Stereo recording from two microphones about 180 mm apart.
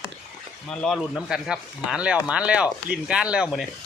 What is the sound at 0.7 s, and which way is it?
Speech, 5° left (ahead or behind).